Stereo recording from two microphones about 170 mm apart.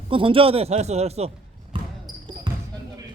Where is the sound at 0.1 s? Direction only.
30° right (ahead or behind).